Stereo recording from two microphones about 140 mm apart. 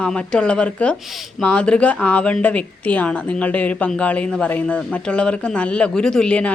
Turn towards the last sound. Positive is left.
turn(degrees=5)  # may be behind; listen again after turning